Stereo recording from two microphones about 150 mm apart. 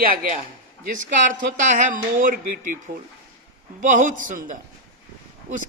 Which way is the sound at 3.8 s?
60° right (ahead or behind).